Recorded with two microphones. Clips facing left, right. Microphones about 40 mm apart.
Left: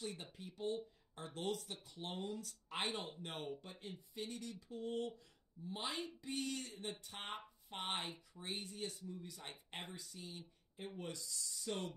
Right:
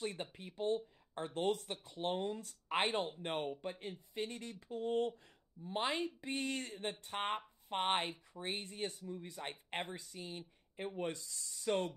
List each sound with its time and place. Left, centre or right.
0.0 s speech: right